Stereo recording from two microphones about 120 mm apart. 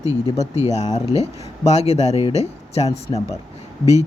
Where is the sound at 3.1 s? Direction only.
35° left (ahead or behind).